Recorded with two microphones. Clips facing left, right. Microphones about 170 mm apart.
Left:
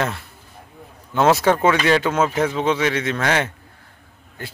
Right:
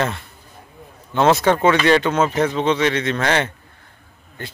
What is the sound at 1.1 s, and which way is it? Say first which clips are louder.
Speech: right 1 dB; 5° left (ahead or behind).